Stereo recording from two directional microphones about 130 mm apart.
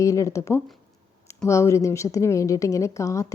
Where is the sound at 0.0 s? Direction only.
25° left (ahead or behind).